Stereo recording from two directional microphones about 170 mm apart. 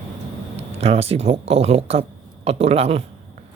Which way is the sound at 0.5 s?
35° right (ahead or behind).